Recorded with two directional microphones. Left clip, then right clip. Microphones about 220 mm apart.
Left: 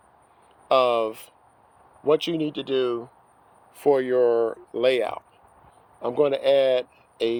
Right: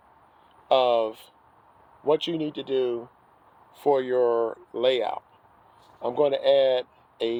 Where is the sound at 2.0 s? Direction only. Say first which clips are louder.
Left 2 dB; 40° left (ahead or behind).